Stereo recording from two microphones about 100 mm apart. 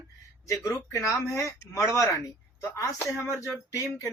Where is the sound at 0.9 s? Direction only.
30° left (ahead or behind).